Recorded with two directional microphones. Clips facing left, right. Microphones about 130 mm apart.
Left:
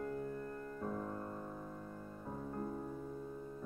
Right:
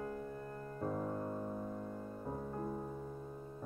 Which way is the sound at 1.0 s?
15° right (ahead or behind).